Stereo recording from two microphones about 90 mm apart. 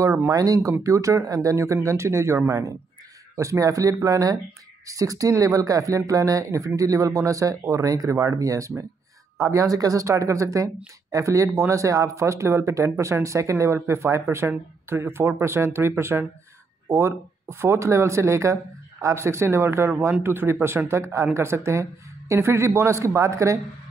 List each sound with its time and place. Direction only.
0.3 s speech: 40° right (ahead or behind)